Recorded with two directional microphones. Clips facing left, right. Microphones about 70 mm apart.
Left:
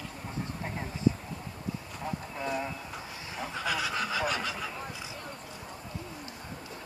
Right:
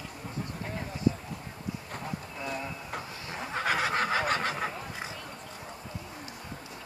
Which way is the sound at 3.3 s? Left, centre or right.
Right.